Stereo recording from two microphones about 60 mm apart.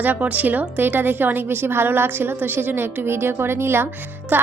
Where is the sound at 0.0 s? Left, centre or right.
Right.